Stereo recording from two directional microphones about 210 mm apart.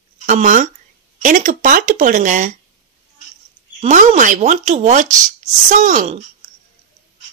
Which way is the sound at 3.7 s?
35° right (ahead or behind).